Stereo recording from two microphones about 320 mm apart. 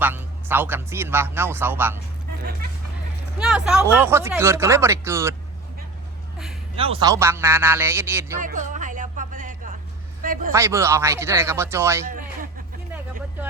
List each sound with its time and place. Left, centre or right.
0.0 s speech: centre
2.4 s speech: right
3.3 s speech: centre
6.7 s speech: centre
8.4 s music: right
10.5 s speech: centre